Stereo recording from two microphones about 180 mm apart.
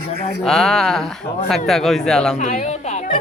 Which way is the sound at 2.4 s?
40° left (ahead or behind).